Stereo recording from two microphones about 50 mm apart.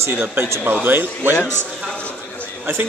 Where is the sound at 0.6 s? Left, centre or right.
Right.